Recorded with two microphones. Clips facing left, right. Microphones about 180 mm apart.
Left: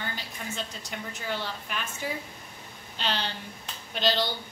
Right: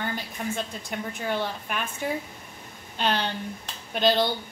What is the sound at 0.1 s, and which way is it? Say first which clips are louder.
A woman's voice: right 7 dB; 55° right (ahead or behind).